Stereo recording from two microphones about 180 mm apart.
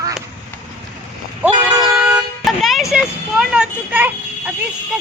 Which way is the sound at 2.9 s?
5° right (ahead or behind).